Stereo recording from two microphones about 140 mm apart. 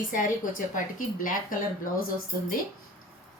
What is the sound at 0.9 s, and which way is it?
Speech, 75° left (ahead or behind).